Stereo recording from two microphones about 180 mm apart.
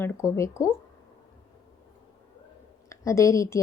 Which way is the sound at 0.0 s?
15° left (ahead or behind).